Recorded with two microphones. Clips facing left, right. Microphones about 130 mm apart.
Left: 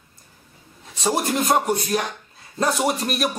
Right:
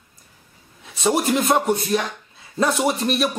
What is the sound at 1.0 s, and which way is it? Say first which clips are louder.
A man's voice: right 3 dB; centre (ahead or behind).